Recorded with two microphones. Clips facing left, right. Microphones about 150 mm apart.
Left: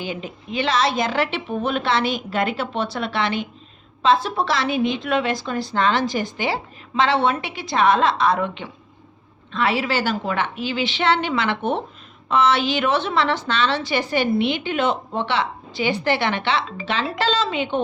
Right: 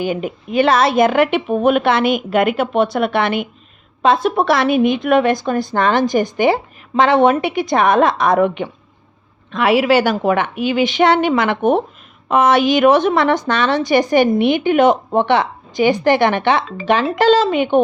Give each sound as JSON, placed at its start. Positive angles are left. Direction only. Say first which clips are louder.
{"t": 0.0, "sound": "a woman's voice", "louder": "right 9 dB", "side_deg": -50}
{"t": 9.8, "sound": "a woman's voice", "louder": "right 9 dB", "side_deg": -55}